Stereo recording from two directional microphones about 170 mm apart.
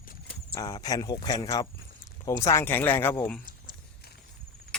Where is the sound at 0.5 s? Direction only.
20° left (ahead or behind).